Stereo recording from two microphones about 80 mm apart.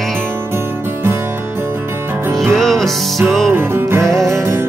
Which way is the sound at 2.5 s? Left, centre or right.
Centre.